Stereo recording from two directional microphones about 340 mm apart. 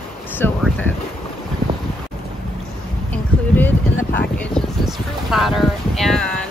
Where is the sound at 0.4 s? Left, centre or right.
Centre.